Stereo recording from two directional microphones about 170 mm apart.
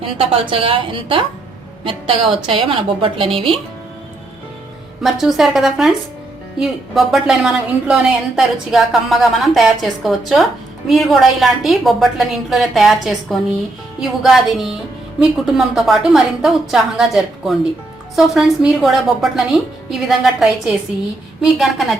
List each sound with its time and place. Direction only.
0.2 s a woman's voice: 35° right (ahead or behind)
5.0 s a woman's voice: centre (ahead or behind)